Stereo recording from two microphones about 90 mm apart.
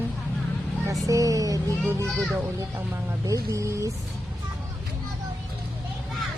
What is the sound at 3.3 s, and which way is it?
Speech, 35° right (ahead or behind).